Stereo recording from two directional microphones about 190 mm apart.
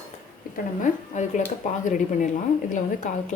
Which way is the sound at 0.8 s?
40° left (ahead or behind).